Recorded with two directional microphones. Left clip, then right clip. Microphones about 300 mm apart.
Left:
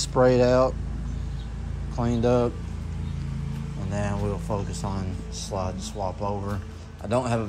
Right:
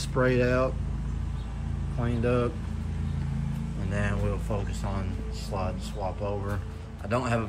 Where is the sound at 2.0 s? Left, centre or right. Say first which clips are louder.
Left 5 dB; centre.